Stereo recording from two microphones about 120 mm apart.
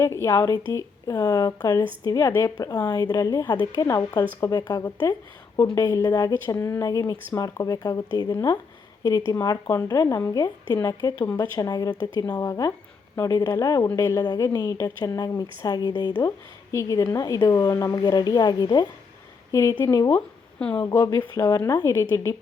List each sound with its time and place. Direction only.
0.0 s a woman's voice: 25° left (ahead or behind)
4.8 s a woman's voice: 20° left (ahead or behind)
20.6 s speech: 10° left (ahead or behind)
20.8 s speech: 30° left (ahead or behind)